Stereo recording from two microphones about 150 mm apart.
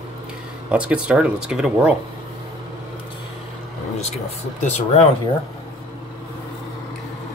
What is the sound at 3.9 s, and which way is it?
Speech, 50° left (ahead or behind).